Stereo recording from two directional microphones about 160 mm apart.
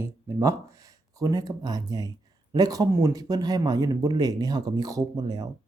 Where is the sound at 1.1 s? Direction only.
25° right (ahead or behind).